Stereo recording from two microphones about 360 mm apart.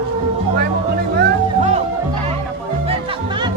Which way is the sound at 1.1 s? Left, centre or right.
Right.